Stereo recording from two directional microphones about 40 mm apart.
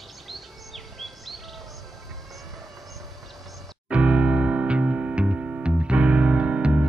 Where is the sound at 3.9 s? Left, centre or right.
Right.